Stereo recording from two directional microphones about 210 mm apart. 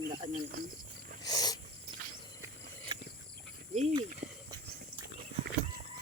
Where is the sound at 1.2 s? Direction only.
20° left (ahead or behind).